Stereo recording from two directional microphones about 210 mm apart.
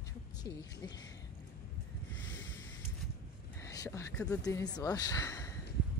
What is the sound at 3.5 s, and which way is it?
Speech, 15° left (ahead or behind).